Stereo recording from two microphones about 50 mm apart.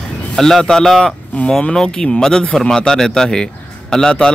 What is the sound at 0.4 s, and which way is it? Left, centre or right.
A man's voice, centre.